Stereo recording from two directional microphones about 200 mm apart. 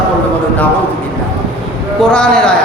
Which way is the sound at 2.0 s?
5° left (ahead or behind).